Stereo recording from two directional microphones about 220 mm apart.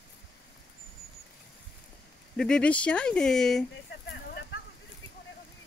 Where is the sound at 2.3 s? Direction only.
5° left (ahead or behind).